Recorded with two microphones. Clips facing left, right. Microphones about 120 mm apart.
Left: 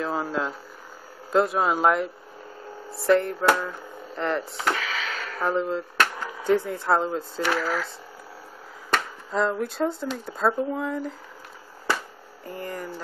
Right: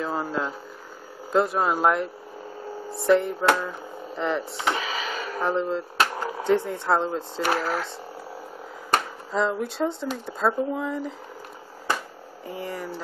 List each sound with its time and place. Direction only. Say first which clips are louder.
0.0 s speech: even; centre (ahead or behind)
5.0 s a sound: right 3 dB; 15° right (ahead or behind)
5.4 s speech: even; centre (ahead or behind)
5.9 s a sound: right 1 dB; 35° right (ahead or behind)
6.4 s speech: even; centre (ahead or behind)
7.5 s speech: even; 30° right (ahead or behind)
9.3 s speech: even; centre (ahead or behind)
12.4 s speech: right 1 dB; 5° right (ahead or behind)